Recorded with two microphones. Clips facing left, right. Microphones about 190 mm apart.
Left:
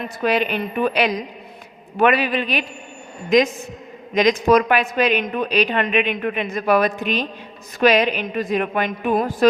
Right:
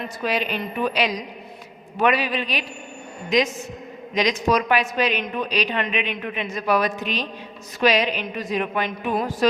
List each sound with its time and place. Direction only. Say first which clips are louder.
0.2 s a woman's voice: left 5 dB; 55° left (ahead or behind)